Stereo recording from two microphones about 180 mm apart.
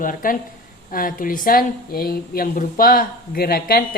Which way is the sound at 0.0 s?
50° left (ahead or behind).